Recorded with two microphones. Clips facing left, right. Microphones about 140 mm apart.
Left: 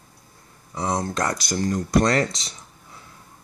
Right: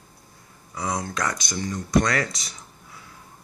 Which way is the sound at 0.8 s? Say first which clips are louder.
Left 3 dB; 30° left (ahead or behind).